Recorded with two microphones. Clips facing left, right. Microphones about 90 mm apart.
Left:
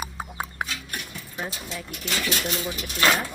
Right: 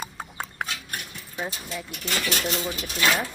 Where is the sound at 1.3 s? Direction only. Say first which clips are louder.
Right 1 dB; 5° right (ahead or behind).